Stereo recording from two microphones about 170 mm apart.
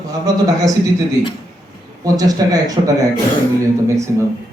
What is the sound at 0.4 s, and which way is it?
Speech, 20° right (ahead or behind).